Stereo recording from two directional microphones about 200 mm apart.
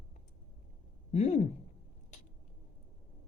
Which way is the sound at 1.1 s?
35° left (ahead or behind).